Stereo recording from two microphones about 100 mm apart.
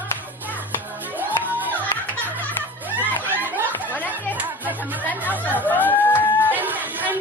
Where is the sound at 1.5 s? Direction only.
20° right (ahead or behind).